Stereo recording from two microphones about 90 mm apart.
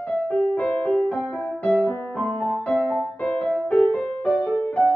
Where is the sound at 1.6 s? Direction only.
15° left (ahead or behind).